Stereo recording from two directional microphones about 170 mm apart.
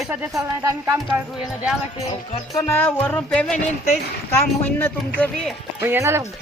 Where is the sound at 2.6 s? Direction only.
10° left (ahead or behind).